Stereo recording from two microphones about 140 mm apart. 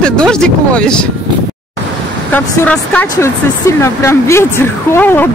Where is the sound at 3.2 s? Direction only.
20° left (ahead or behind).